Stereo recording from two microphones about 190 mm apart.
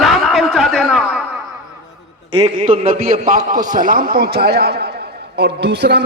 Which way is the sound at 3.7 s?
45° right (ahead or behind).